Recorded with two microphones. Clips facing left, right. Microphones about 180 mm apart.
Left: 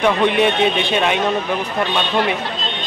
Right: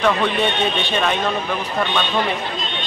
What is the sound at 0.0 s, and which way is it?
Speech, 15° left (ahead or behind).